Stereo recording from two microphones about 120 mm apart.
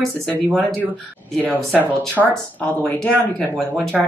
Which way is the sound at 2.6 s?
15° left (ahead or behind).